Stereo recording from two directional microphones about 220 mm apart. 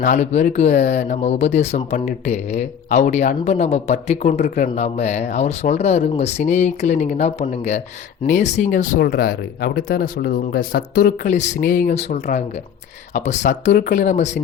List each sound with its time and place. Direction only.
0.0 s speech: 35° left (ahead or behind)